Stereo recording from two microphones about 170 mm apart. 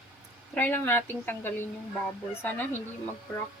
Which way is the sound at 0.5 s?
10° left (ahead or behind).